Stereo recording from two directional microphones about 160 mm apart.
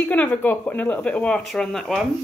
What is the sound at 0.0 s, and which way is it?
Speech, 10° left (ahead or behind).